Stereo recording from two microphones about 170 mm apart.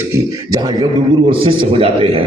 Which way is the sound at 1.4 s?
30° right (ahead or behind).